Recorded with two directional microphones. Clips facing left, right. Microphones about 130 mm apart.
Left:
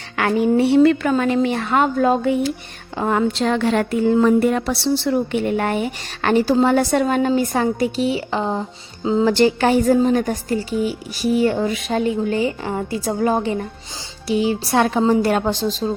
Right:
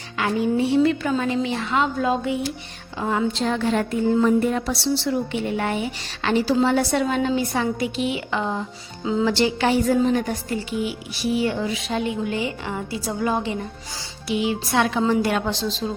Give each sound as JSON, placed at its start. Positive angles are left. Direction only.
{"t": 0.2, "sound": "a woman's voice", "side_deg": 65}
{"t": 9.3, "sound": "a woman's voice", "side_deg": 50}